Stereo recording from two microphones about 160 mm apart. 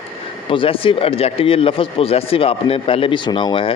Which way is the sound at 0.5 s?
35° left (ahead or behind).